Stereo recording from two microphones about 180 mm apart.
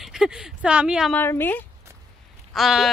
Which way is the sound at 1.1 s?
10° left (ahead or behind).